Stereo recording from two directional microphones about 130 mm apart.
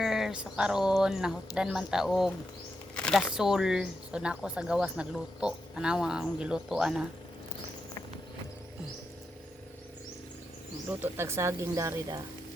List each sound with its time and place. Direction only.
0.0 s speech: 5° right (ahead or behind)
11.0 s speech: 20° right (ahead or behind)